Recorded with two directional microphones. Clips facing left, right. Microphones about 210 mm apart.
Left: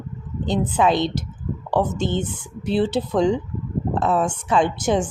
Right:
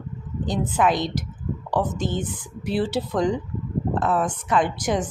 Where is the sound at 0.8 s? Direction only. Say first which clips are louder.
Left 2 dB; 25° left (ahead or behind).